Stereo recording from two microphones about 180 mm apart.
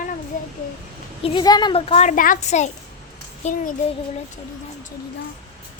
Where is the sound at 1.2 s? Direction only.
25° left (ahead or behind); by 3.7 s 45° left (ahead or behind).